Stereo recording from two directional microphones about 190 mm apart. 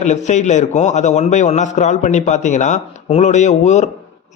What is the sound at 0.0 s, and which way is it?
A man's voice, 40° left (ahead or behind).